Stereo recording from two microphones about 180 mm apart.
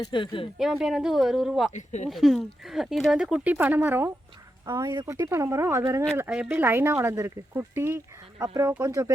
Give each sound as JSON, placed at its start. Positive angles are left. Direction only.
{"t": 0.0, "sound": "speech", "side_deg": 25}
{"t": 0.6, "sound": "speech", "side_deg": 0}
{"t": 1.7, "sound": "speech", "side_deg": 40}
{"t": 2.0, "sound": "speech", "side_deg": 0}